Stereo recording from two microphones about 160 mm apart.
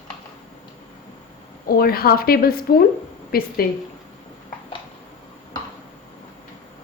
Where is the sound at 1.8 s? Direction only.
70° left (ahead or behind).